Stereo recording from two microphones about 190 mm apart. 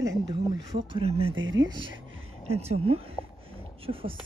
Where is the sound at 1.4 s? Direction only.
85° right.